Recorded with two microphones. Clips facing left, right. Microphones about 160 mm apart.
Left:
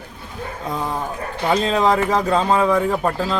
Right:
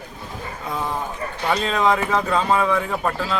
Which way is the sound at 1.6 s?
35° left (ahead or behind).